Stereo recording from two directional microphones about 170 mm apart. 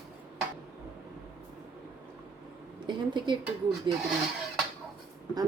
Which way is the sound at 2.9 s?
25° right (ahead or behind).